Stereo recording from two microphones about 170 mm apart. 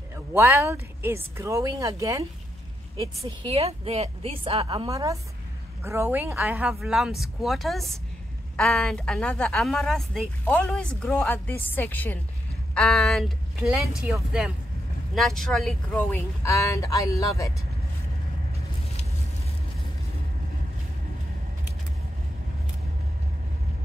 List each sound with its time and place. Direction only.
0.1 s speech: 15° right (ahead or behind)
3.2 s a woman's voice: 35° right (ahead or behind)
4.8 s a woman's voice: 20° right (ahead or behind); by 15.7 s centre (ahead or behind)
15.9 s speech: 15° left (ahead or behind)